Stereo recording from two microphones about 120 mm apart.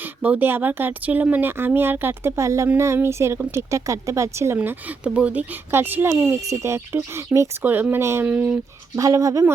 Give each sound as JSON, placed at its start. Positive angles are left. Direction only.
{"t": 0.0, "sound": "speech", "side_deg": -15}
{"t": 9.0, "sound": "speech", "side_deg": -25}